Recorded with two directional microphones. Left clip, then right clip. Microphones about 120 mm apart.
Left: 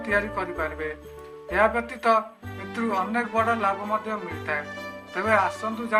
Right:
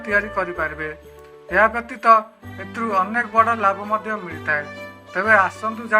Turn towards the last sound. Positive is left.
turn(degrees=-40)  # may be behind; listen again after turning